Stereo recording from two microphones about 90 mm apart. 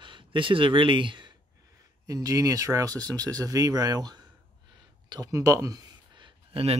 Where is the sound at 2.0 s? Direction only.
40° right (ahead or behind).